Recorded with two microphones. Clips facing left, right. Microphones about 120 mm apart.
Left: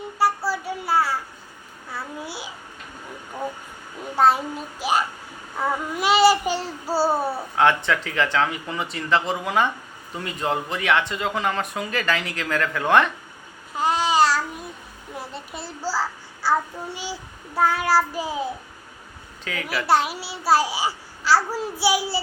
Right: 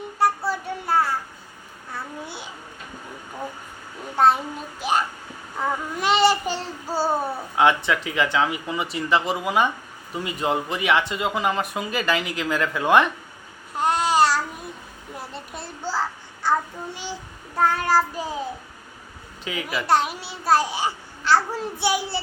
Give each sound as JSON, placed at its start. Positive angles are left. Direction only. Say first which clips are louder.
{"t": 0.2, "sound": "child singing", "louder": "even", "side_deg": 5}
{"t": 1.9, "sound": "babbling", "louder": "left 1 dB", "side_deg": 5}
{"t": 4.1, "sound": "a child's voice", "louder": "even", "side_deg": 0}
{"t": 5.5, "sound": "child singing", "louder": "left 1 dB", "side_deg": 5}
{"t": 7.5, "sound": "speech", "louder": "right 1 dB", "side_deg": -10}
{"t": 13.7, "sound": "babbling", "louder": "even", "side_deg": 0}
{"t": 15.1, "sound": "a child's voice", "louder": "left 1 dB", "side_deg": 0}
{"t": 19.5, "sound": "speech", "louder": "right 1 dB", "side_deg": -15}
{"t": 19.9, "sound": "a child's voice", "louder": "left 1 dB", "side_deg": 5}